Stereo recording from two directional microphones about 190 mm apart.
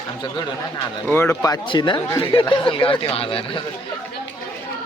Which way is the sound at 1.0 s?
10° left (ahead or behind).